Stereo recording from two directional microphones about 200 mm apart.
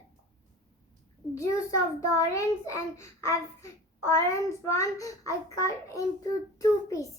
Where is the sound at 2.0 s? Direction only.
15° left (ahead or behind).